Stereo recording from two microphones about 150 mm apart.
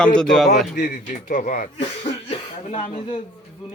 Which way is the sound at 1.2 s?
60° left (ahead or behind).